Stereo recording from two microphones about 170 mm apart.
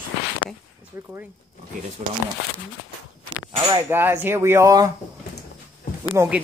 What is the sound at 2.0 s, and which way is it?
Speech, 45° right (ahead or behind).